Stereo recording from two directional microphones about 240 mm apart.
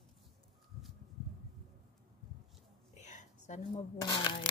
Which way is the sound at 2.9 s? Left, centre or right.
Left.